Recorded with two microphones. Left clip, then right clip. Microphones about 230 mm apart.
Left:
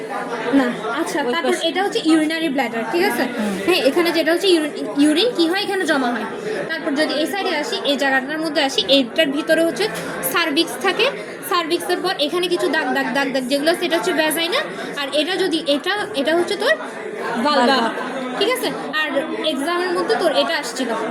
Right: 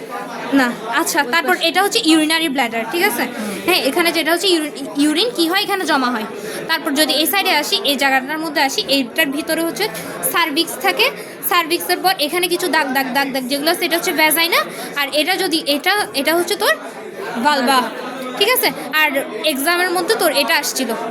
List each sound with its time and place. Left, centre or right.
0.5 s a woman's voice: right
6.7 s a woman's voice: right